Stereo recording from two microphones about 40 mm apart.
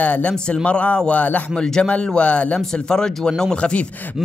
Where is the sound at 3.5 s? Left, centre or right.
Left.